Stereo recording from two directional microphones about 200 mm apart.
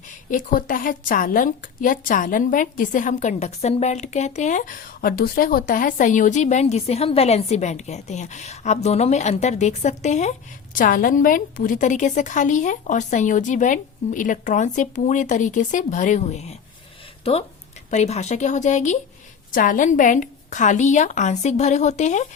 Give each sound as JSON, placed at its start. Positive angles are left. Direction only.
{"t": 0.3, "sound": "a woman's voice", "side_deg": 40}